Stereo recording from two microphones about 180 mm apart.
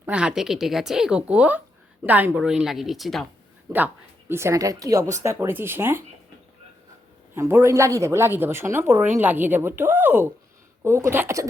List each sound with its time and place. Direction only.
0.0 s speech: 5° right (ahead or behind)
3.7 s a woman's voice: 10° right (ahead or behind)
7.3 s a woman's voice: 15° right (ahead or behind)